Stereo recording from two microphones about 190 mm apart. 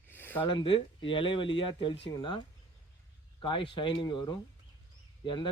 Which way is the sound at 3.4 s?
25° left (ahead or behind).